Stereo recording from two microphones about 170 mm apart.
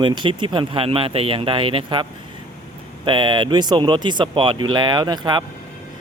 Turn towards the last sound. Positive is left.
turn(degrees=-25)  # may be behind; listen again after turning